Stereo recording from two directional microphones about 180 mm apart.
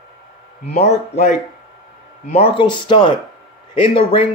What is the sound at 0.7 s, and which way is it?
A man's voice, 40° left (ahead or behind).